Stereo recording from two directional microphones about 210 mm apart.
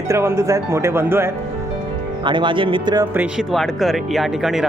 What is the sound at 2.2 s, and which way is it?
Speech, 20° right (ahead or behind).